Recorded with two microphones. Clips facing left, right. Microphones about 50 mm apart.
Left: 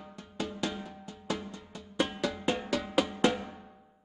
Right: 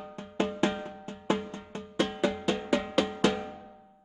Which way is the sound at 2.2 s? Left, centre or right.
Centre.